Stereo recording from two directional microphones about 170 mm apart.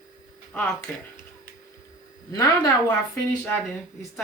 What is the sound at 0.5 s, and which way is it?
Speech, 10° left (ahead or behind).